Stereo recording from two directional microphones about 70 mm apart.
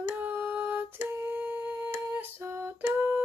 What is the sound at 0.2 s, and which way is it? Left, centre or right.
Humming, right.